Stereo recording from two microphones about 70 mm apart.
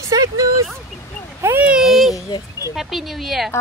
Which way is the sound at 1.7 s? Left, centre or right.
Centre.